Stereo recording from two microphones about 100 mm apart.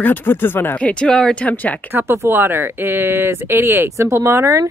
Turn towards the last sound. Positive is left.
turn(degrees=-25)  # may be behind; listen again after turning